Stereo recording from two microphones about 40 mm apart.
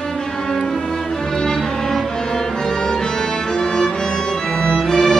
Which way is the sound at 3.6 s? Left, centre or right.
Centre.